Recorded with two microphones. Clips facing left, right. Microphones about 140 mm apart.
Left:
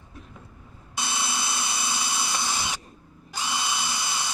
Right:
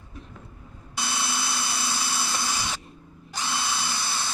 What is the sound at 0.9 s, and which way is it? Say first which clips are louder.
Drill: even; 20° left (ahead or behind).